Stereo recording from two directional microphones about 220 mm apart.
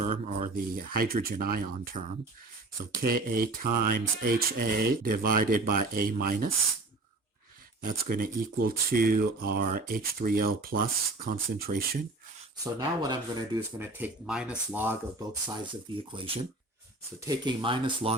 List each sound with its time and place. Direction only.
0.0 s speech: 35° right (ahead or behind)
7.9 s speech: 40° right (ahead or behind)
12.8 s speech: 20° right (ahead or behind)
16.1 s speech: 25° right (ahead or behind)